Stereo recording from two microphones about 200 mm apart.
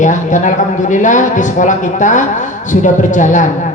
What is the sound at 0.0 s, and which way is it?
Speech, 40° left (ahead or behind).